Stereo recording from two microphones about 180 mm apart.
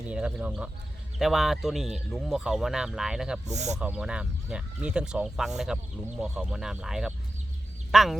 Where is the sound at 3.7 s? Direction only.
5° right (ahead or behind).